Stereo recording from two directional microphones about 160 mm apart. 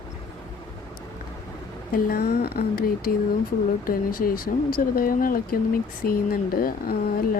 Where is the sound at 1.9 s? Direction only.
65° left (ahead or behind).